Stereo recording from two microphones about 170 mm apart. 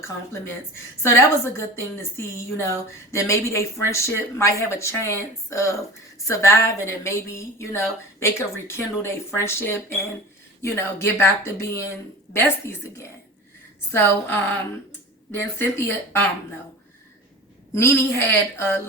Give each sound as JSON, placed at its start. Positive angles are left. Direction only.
{"t": 0.0, "sound": "a woman's voice", "side_deg": 15}
{"t": 15.3, "sound": "a woman's voice", "side_deg": 15}
{"t": 17.7, "sound": "a woman's voice", "side_deg": 15}